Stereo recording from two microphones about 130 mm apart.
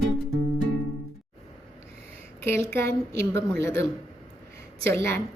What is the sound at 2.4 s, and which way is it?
A woman's voice, 20° left (ahead or behind).